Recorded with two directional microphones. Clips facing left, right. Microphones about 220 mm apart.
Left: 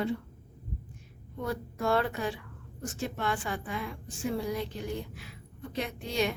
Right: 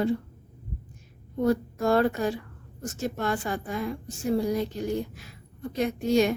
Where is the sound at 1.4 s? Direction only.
40° right (ahead or behind).